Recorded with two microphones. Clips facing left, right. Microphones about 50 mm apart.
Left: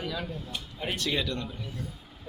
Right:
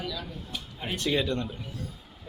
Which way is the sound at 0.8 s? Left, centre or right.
Centre.